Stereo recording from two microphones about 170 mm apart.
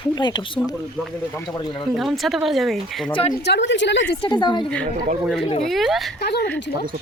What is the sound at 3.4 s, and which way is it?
Speech, 85° left.